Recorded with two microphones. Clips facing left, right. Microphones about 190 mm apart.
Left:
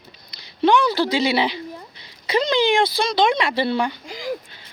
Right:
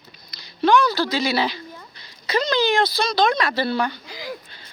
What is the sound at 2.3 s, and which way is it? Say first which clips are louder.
Speech: left 2 dB; 25° left (ahead or behind).